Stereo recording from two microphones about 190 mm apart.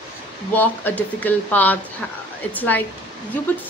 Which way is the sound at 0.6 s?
10° left (ahead or behind).